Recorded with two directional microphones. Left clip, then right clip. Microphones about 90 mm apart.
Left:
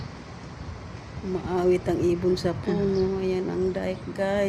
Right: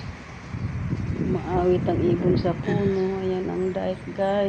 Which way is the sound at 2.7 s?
25° left (ahead or behind).